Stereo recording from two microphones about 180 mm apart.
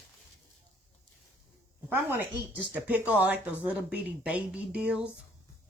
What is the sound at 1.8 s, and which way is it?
Speech, 10° right (ahead or behind).